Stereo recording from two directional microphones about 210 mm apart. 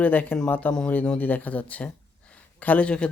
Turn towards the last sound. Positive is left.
turn(degrees=5)  # may be behind; listen again after turning